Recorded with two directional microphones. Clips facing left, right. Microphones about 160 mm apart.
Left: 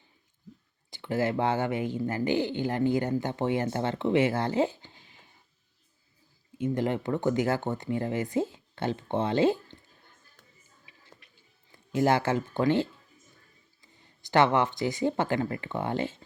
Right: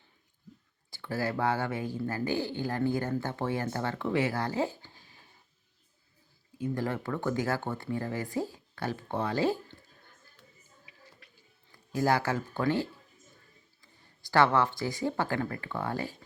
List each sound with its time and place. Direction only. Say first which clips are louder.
0.9 s speech: left 5 dB; 20° left (ahead or behind)
6.6 s speech: left 4 dB; 20° left (ahead or behind)
11.2 s music: right 2 dB; 20° left (ahead or behind)
11.7 s speech: left 3 dB; 20° left (ahead or behind)